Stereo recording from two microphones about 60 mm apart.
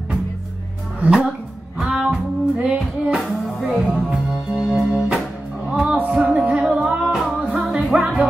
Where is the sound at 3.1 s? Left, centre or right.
Centre.